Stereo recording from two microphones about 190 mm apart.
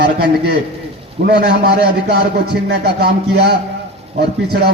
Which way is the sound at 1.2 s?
60° right (ahead or behind).